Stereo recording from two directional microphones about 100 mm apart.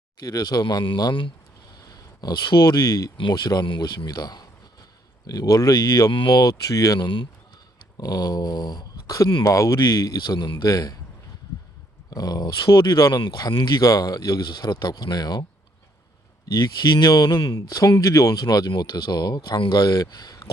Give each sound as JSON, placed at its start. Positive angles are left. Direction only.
{"t": 0.2, "sound": "speech", "side_deg": 40}
{"t": 3.2, "sound": "speech", "side_deg": 50}
{"t": 12.1, "sound": "speech", "side_deg": 40}
{"t": 16.6, "sound": "speech", "side_deg": 40}